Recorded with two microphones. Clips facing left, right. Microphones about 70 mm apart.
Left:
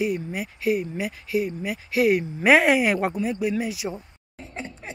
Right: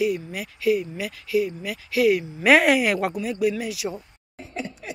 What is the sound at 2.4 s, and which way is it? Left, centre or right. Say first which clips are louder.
Speech: right 1 dB; left.